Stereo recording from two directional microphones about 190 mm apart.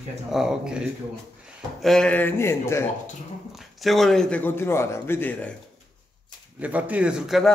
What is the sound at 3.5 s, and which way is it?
Speech, centre (ahead or behind).